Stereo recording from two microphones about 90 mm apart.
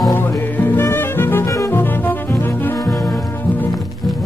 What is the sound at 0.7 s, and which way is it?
Music, 25° left (ahead or behind).